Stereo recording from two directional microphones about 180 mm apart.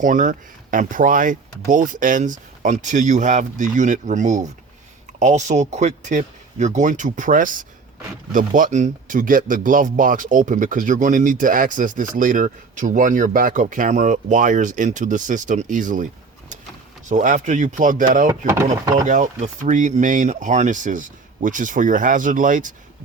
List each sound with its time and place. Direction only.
0.0 s a man's voice: 45° right (ahead or behind)
17.1 s a man's voice: 45° right (ahead or behind)
18.3 s speech: 15° right (ahead or behind)
19.0 s a man's voice: 40° right (ahead or behind)